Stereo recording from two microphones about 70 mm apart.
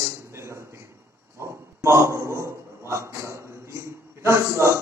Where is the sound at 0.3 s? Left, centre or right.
Right.